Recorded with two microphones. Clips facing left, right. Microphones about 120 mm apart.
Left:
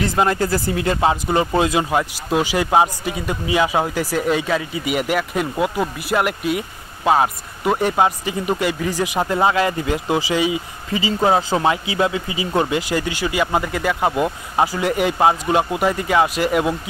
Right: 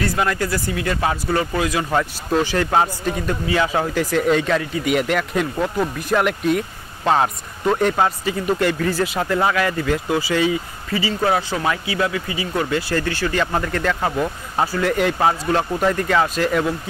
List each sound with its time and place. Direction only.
0.0 s speech: 25° left (ahead or behind)
1.9 s speech: 10° left (ahead or behind)